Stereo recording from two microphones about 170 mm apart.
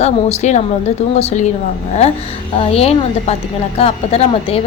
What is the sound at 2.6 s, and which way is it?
Speech, 35° left (ahead or behind).